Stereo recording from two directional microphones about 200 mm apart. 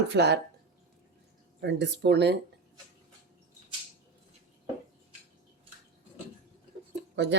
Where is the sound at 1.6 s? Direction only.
60° right (ahead or behind).